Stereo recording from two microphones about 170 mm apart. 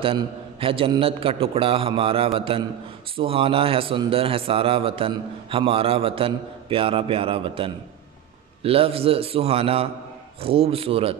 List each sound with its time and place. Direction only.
0.0 s a man's voice: 35° right (ahead or behind)